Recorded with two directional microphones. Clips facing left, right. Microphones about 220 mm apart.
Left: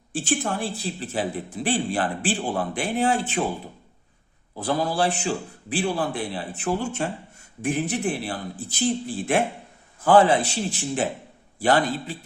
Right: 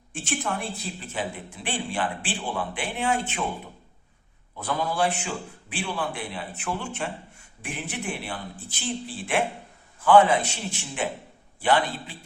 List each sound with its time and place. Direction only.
0.1 s speech: 35° left (ahead or behind)
4.5 s speech: 35° left (ahead or behind)